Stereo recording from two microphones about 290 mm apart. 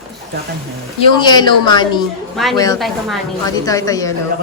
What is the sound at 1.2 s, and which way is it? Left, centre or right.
A woman's voice, centre.